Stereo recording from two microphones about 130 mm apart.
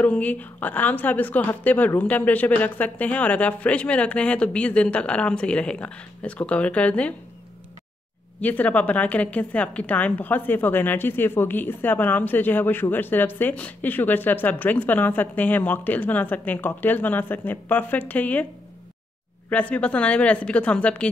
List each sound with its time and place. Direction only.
0.0 s a woman's voice: 10° left (ahead or behind)
8.4 s a woman's voice: 10° left (ahead or behind)
19.5 s a woman's voice: 10° left (ahead or behind)